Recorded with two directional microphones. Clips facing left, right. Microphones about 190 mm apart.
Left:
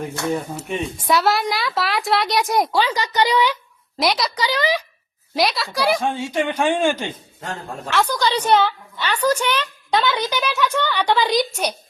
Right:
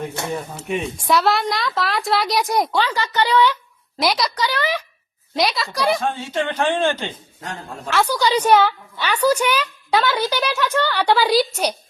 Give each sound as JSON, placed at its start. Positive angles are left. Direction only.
{"t": 0.7, "sound": "a woman's voice", "side_deg": 0}
{"t": 2.8, "sound": "a woman's voice", "side_deg": 15}
{"t": 4.0, "sound": "a woman's voice", "side_deg": 0}
{"t": 4.4, "sound": "speech", "side_deg": 15}
{"t": 5.4, "sound": "a woman's voice", "side_deg": 0}
{"t": 6.0, "sound": "speech", "side_deg": 15}
{"t": 7.9, "sound": "a woman's voice", "side_deg": -10}